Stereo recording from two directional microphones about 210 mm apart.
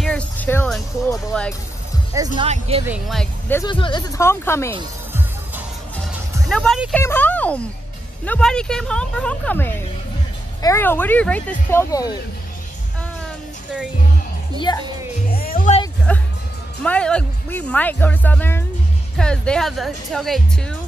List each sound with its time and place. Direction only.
0.0 s a sound: 5° left (ahead or behind)
0.7 s speech: centre (ahead or behind)
2.1 s speech: 15° right (ahead or behind)
2.4 s speech: 30° right (ahead or behind)
2.9 s speech: centre (ahead or behind)
3.6 s speech: 20° left (ahead or behind)
6.5 s speech: centre (ahead or behind)
15.2 s music: 45° left (ahead or behind)
16.1 s speech: 5° left (ahead or behind)